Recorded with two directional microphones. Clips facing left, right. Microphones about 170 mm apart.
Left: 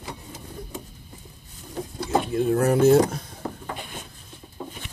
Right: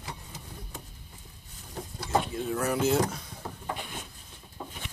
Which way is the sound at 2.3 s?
55° left (ahead or behind).